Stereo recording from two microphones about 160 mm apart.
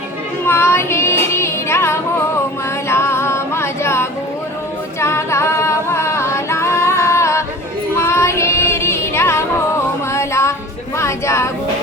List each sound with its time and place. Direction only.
0.4 s child singing: 15° left (ahead or behind)
2.9 s music: 15° left (ahead or behind)
4.9 s singing: 15° left (ahead or behind)
7.9 s music: 15° left (ahead or behind)
10.9 s a sound: 15° left (ahead or behind)